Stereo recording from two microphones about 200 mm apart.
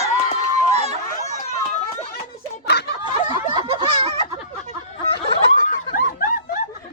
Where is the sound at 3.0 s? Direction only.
25° right (ahead or behind).